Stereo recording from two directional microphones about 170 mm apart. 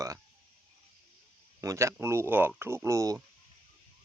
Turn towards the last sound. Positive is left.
turn(degrees=-15)  # may be behind; listen again after turning